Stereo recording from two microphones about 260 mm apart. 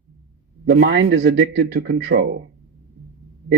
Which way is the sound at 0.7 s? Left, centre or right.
Right.